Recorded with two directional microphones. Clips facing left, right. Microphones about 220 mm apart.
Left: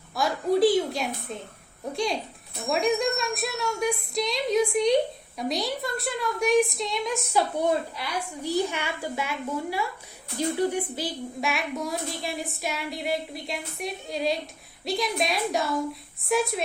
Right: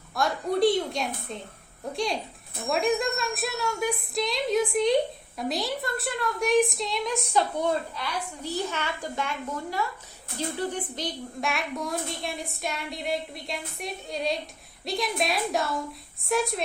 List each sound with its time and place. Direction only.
0.2 s a woman's voice: centre (ahead or behind)
7.9 s a woman's voice: 15° left (ahead or behind)